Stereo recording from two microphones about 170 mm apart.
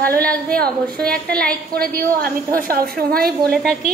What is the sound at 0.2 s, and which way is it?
A woman's voice, 5° left (ahead or behind).